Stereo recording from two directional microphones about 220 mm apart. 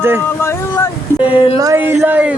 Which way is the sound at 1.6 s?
15° right (ahead or behind).